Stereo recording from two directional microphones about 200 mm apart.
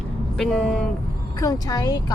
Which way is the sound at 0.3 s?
5° left (ahead or behind).